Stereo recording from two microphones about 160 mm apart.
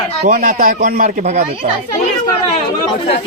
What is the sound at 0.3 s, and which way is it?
A man's voice, 60° right (ahead or behind).